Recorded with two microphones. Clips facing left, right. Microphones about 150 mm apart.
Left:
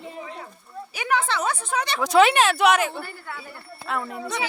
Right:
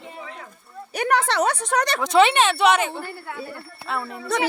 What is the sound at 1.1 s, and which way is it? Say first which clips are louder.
Speech: right 3 dB; 75° right (ahead or behind).